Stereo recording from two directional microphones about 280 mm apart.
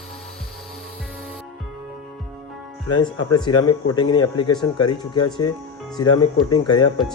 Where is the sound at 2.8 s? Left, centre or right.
Centre.